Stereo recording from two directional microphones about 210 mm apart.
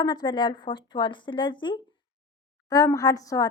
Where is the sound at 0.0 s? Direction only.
20° left (ahead or behind).